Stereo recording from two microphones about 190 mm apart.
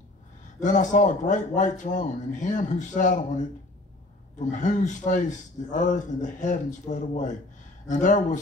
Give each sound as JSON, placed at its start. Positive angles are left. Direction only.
{"t": 0.6, "sound": "a man's voice", "side_deg": 40}
{"t": 4.4, "sound": "a man's voice", "side_deg": 40}